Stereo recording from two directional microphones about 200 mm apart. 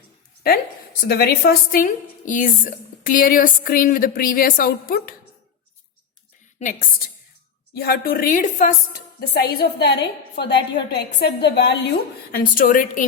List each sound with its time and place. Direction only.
1.0 s a woman's voice: 50° left (ahead or behind)
6.6 s a woman's voice: 40° left (ahead or behind)
7.7 s a woman's voice: 50° left (ahead or behind)
9.2 s a woman's voice: 55° left (ahead or behind)
12.3 s a woman's voice: 45° left (ahead or behind)